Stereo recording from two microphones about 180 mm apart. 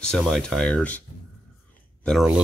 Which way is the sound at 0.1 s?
5° left (ahead or behind).